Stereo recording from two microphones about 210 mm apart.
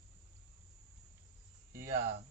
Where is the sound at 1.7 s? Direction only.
40° right (ahead or behind).